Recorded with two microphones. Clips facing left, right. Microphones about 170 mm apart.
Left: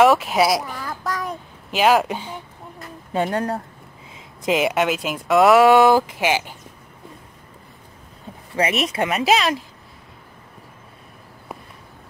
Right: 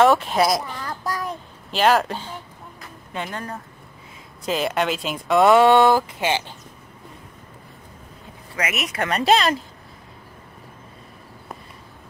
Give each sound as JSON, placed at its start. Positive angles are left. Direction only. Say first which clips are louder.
{"t": 0.0, "sound": "a child's voice", "louder": "left 1 dB", "side_deg": 5}
{"t": 3.1, "sound": "speech", "louder": "left 9 dB", "side_deg": 40}
{"t": 4.5, "sound": "speech", "louder": "left 4 dB", "side_deg": 15}
{"t": 4.7, "sound": "speech", "louder": "left 2 dB", "side_deg": 5}
{"t": 5.9, "sound": "speech", "louder": "left 3 dB", "side_deg": 15}
{"t": 8.5, "sound": "speech", "louder": "left 6 dB", "side_deg": 30}
{"t": 9.1, "sound": "speech", "louder": "right 2 dB", "side_deg": 0}